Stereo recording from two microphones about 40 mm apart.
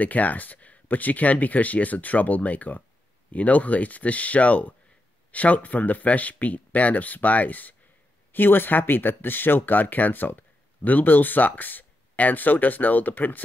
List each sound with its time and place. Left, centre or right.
0.0 s speech: left
8.3 s speech: left